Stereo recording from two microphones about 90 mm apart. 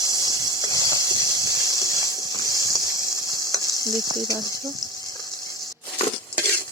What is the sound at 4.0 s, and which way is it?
Speech, 45° right (ahead or behind).